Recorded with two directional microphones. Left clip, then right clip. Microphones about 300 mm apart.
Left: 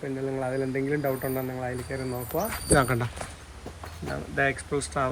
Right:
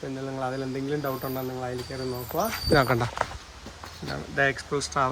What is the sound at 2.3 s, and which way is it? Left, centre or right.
Speech, centre.